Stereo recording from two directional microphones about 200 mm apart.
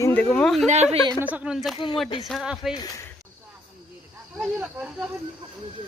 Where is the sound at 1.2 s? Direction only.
5° right (ahead or behind).